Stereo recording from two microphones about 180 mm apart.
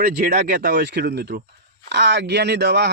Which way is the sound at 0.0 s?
55° right (ahead or behind).